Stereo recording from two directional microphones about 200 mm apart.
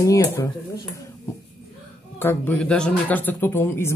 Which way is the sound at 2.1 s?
10° left (ahead or behind).